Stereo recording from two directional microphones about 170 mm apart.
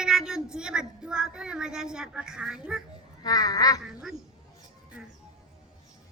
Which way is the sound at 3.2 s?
20° left (ahead or behind).